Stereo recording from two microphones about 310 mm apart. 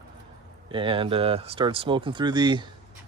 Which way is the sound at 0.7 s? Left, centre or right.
Centre.